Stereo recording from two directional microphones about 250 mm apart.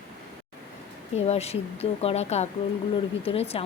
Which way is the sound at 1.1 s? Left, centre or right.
Left.